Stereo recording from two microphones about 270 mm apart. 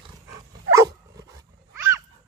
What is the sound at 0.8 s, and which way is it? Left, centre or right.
Dog, centre.